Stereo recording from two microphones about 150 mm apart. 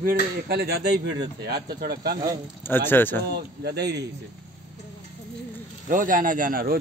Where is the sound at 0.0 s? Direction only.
90° right.